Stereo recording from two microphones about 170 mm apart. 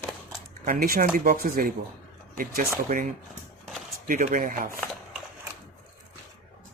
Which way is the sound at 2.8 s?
50° right (ahead or behind).